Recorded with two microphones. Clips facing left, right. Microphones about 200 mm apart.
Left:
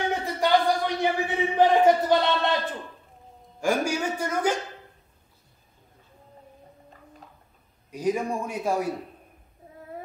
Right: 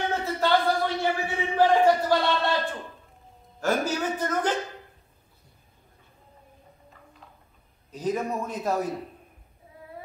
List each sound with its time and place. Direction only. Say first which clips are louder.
0.1 s a sound: left 1 dB; 15° left (ahead or behind)
3.6 s a man's voice: left 1 dB; 10° left (ahead or behind)
7.9 s a man's voice: left 2 dB; 10° left (ahead or behind)